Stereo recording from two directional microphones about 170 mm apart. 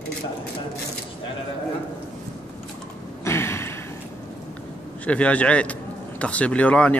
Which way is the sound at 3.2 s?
15° left (ahead or behind).